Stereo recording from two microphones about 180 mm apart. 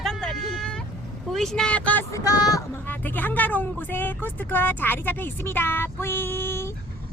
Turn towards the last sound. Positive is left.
turn(degrees=15)  # may be behind; listen again after turning